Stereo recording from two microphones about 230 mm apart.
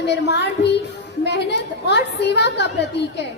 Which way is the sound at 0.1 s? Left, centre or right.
Left.